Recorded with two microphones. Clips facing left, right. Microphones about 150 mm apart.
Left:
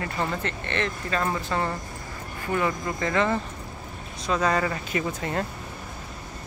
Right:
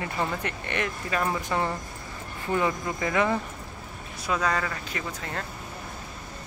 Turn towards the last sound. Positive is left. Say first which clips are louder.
# left 6 dB
turn(degrees=20)  # may be behind; listen again after turning